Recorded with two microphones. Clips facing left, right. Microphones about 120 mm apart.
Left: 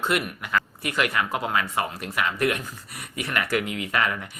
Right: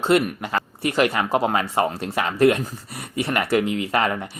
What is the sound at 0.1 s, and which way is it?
Speech, 30° right (ahead or behind).